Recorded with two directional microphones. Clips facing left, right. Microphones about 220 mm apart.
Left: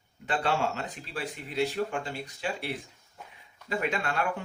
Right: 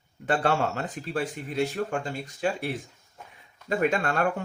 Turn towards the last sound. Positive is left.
turn(degrees=-45)  # may be behind; listen again after turning